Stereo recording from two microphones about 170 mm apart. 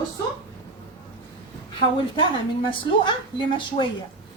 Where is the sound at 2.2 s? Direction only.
30° left (ahead or behind).